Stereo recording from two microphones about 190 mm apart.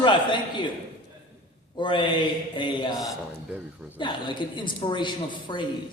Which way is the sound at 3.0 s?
Centre (ahead or behind).